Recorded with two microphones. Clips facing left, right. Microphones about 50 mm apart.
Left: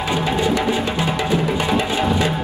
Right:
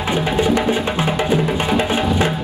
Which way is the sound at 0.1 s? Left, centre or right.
Right.